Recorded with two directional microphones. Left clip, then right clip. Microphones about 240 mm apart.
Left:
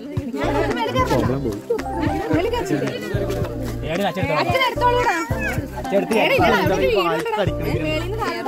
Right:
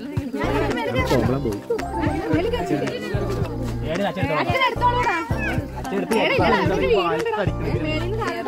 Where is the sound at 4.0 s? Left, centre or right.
Left.